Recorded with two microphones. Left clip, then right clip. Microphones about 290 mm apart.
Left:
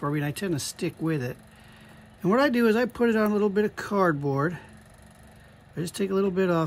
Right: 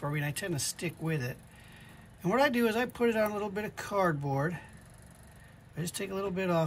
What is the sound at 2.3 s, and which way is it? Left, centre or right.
Speech, centre.